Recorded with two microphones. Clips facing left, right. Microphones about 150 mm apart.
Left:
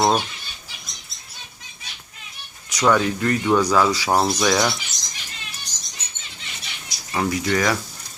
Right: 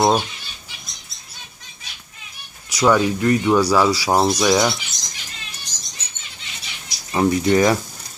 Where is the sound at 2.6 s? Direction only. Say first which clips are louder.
Right 2 dB; 10° right (ahead or behind).